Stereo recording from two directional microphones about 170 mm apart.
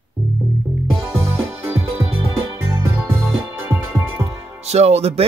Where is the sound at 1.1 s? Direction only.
15° right (ahead or behind).